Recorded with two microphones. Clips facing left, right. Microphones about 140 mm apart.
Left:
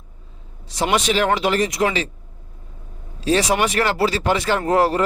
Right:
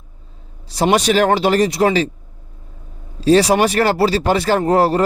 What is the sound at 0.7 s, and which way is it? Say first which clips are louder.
Speech: right 5 dB; 35° right (ahead or behind).